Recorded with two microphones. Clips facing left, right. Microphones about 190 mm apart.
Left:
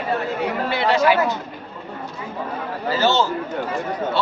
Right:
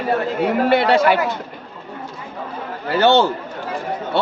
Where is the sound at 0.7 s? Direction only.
55° right (ahead or behind).